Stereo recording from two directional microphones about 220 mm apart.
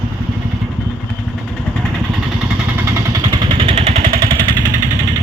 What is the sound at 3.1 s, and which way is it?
Vehicle, 20° right (ahead or behind).